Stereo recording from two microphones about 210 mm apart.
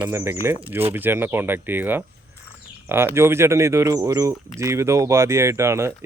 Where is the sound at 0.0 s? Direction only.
10° right (ahead or behind).